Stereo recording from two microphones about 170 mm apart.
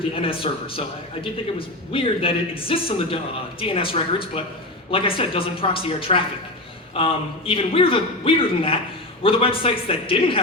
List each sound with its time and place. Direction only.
0.1 s a man's voice: 30° left (ahead or behind)